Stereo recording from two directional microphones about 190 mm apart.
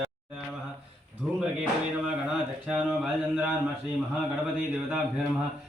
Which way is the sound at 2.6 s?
Centre (ahead or behind).